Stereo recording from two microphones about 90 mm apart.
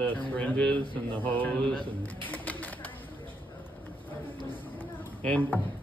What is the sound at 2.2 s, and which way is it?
Bird, 20° left (ahead or behind).